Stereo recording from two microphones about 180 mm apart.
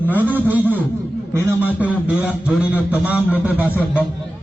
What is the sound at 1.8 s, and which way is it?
A man's voice, 10° right (ahead or behind).